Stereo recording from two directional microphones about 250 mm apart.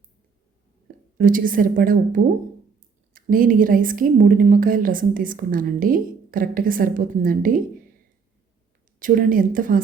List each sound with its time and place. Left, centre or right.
1.2 s a woman's voice: right
9.0 s a woman's voice: right